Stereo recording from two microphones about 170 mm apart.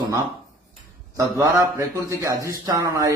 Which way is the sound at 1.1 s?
20° right (ahead or behind).